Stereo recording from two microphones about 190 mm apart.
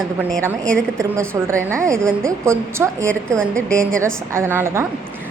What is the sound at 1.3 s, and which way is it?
A woman's voice, 15° right (ahead or behind).